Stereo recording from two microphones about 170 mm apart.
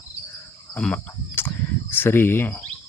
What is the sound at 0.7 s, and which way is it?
Cricket, 5° left (ahead or behind).